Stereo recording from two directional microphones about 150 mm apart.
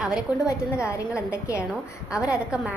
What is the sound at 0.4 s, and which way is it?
Speech, 20° left (ahead or behind).